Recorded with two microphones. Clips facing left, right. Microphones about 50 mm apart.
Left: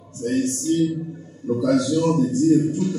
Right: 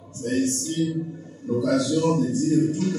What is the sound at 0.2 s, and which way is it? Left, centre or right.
A man's voice, centre.